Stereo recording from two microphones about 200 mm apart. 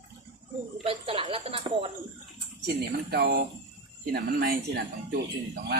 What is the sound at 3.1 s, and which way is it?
Speech, 55° right (ahead or behind).